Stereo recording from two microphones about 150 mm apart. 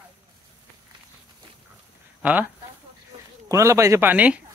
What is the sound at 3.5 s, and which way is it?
Speech, 20° right (ahead or behind).